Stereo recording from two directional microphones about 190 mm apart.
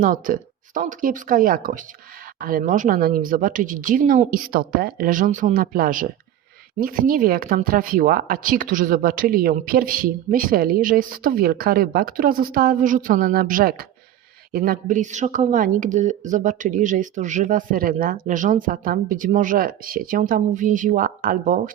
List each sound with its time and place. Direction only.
0.0 s speech: 45° right (ahead or behind)